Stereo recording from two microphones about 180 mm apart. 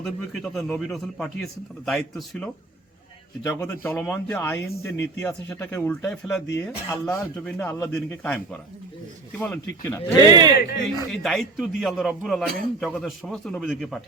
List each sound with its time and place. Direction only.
0.0 s a man's voice: centre (ahead or behind)
9.4 s a man's voice: 10° left (ahead or behind)
10.2 s speech: 20° right (ahead or behind)
11.1 s a man's voice: centre (ahead or behind)